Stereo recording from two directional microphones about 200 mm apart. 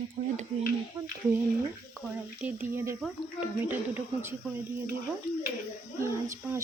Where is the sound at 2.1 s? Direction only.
10° right (ahead or behind).